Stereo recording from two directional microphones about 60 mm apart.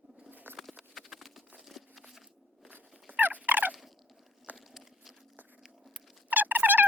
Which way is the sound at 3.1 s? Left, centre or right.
Right.